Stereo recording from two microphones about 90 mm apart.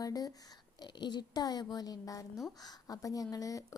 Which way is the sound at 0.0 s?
45° left (ahead or behind).